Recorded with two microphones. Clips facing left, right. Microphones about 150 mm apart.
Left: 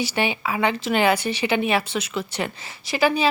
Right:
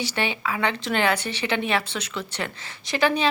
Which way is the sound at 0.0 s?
15° left (ahead or behind).